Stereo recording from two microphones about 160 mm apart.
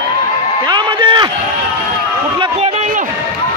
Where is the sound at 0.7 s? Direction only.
30° right (ahead or behind).